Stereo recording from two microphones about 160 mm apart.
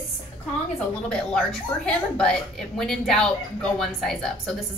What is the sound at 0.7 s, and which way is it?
Speech, 5° left (ahead or behind).